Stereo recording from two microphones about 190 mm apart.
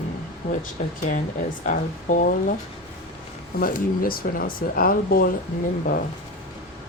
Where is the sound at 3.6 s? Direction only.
50° left (ahead or behind).